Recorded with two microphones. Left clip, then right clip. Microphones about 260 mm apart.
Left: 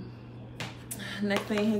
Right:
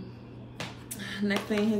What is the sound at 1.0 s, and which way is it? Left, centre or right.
Speech, centre.